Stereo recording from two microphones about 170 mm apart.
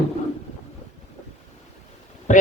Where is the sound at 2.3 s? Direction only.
45° left (ahead or behind).